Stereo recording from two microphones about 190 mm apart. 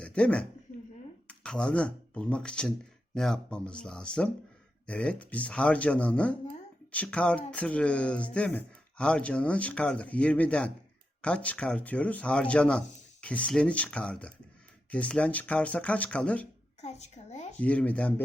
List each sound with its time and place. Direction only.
0.0 s speech: 5° left (ahead or behind)
16.8 s a woman's voice: 35° left (ahead or behind)
17.6 s speech: 5° left (ahead or behind)